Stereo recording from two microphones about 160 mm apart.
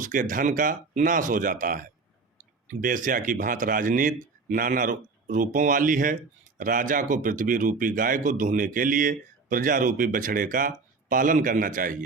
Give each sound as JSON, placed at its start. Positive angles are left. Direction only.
{"t": 0.0, "sound": "speech", "side_deg": -55}